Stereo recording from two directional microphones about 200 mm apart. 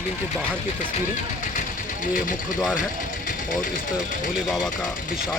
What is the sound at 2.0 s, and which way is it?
Speech, 40° left (ahead or behind).